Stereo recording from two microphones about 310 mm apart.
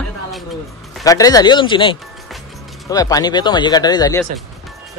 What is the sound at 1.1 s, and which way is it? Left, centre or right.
Speech, centre.